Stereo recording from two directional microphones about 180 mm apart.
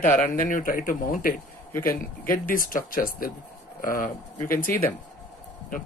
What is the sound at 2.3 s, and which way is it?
Speech, 50° left (ahead or behind).